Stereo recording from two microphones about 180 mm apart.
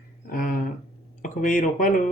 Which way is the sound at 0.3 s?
50° left (ahead or behind).